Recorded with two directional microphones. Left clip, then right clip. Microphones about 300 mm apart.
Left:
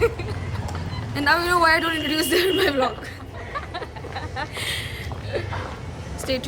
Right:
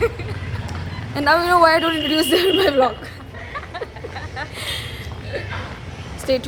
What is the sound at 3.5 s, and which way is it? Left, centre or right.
Vehicle, centre.